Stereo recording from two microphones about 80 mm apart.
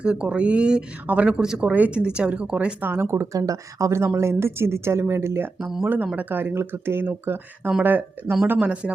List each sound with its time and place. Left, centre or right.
0.0 s speech: centre
2.8 s speech: right
3.3 s speech: right
5.5 s speech: centre
6.1 s speech: right